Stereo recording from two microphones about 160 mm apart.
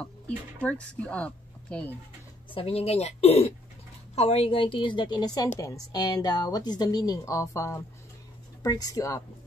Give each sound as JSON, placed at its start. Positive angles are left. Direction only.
{"t": 0.6, "sound": "speech", "side_deg": 10}
{"t": 2.5, "sound": "a woman's voice", "side_deg": 40}